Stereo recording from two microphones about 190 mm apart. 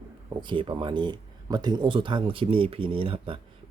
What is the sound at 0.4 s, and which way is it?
Speech, 25° right (ahead or behind).